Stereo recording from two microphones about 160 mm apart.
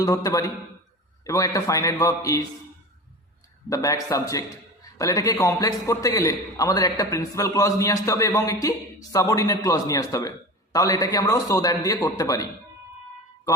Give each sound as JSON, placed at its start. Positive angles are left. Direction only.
{"t": 0.0, "sound": "a man's voice", "side_deg": 20}
{"t": 3.7, "sound": "a man's voice", "side_deg": 20}